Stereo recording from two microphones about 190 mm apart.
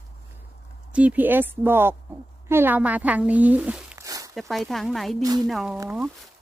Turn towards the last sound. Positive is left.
turn(degrees=-5)  # may be behind; listen again after turning